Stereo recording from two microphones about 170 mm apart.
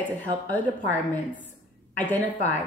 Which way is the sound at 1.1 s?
10° left (ahead or behind).